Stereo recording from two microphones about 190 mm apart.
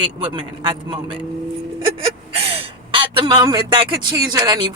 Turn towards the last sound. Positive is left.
turn(degrees=-20)  # may be behind; listen again after turning